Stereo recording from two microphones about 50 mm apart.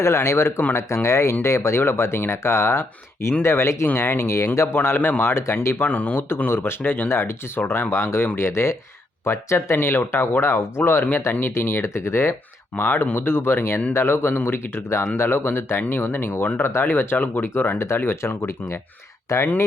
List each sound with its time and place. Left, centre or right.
0.0 s speech: left
3.9 s speech: left
5.2 s speech: left
5.8 s speech: left
6.5 s speech: left
9.7 s speech: left
12.7 s speech: left
13.1 s speech: left
17.7 s speech: left
19.3 s speech: left